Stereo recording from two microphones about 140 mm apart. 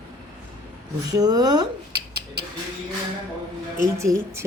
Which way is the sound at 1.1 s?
25° right (ahead or behind).